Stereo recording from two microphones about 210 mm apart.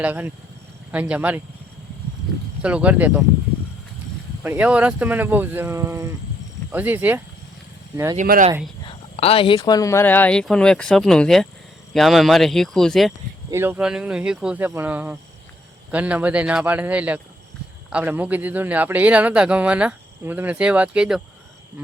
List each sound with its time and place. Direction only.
0.0 s speech: 10° right (ahead or behind)
2.6 s speech: 5° right (ahead or behind)
4.4 s speech: 10° right (ahead or behind)
8.1 s speech: 35° right (ahead or behind)
8.9 s speech: 30° left (ahead or behind); by 13.1 s centre (ahead or behind)
13.5 s speech: 10° right (ahead or behind)